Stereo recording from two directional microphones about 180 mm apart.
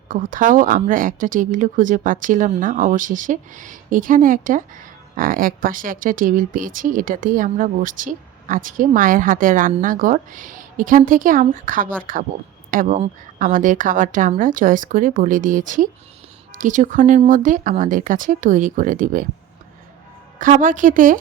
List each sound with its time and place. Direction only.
0.1 s speech: 45° right (ahead or behind)
20.4 s speech: 45° right (ahead or behind)